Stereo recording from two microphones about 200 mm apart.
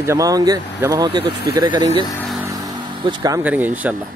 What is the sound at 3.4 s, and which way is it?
Speech, 10° right (ahead or behind).